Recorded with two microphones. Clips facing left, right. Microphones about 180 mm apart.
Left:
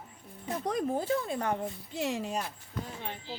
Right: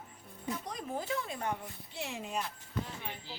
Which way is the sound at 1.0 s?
35° left (ahead or behind).